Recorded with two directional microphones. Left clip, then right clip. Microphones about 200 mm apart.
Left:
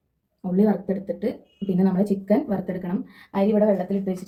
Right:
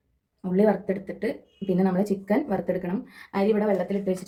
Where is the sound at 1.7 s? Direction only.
30° right (ahead or behind).